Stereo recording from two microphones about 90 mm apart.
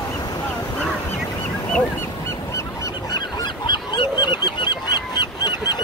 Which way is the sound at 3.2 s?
60° left (ahead or behind).